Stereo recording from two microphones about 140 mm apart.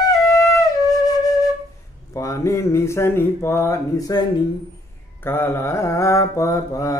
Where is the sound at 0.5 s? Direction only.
25° left (ahead or behind).